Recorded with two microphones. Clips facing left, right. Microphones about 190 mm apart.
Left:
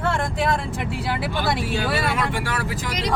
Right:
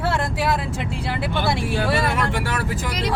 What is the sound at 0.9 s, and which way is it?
Speech, centre (ahead or behind).